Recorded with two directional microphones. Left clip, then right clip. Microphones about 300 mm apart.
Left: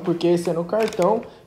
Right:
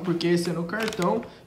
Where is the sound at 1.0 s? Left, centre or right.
Right.